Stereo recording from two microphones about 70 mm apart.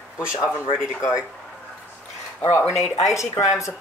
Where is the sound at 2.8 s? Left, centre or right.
Centre.